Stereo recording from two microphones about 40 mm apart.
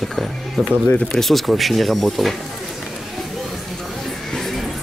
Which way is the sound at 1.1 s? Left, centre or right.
Centre.